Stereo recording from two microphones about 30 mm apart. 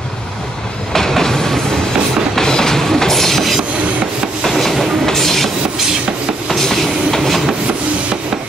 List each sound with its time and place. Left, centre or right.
0.9 s train: centre
2.3 s music: centre
3.0 s train: centre
6.5 s train: centre